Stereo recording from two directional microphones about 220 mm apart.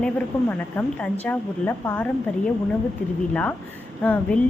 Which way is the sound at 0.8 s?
10° left (ahead or behind).